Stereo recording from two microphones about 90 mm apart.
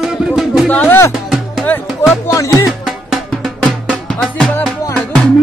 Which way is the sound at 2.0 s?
30° left (ahead or behind).